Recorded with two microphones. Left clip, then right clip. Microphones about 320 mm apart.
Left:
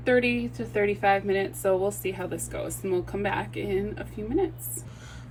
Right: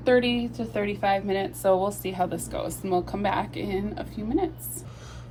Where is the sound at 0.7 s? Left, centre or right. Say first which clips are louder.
Left 2 dB; centre.